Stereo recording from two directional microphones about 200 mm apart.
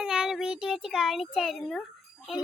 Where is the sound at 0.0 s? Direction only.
5° right (ahead or behind).